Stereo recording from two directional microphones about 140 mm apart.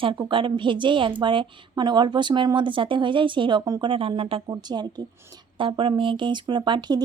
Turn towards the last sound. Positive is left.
turn(degrees=-30)  # may be behind; listen again after turning